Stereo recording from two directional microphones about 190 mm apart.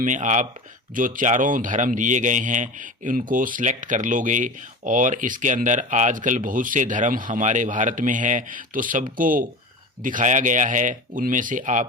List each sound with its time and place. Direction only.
0.0 s a man's voice: 40° right (ahead or behind)